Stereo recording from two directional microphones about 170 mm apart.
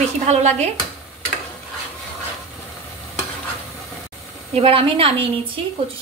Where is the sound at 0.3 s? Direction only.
40° right (ahead or behind).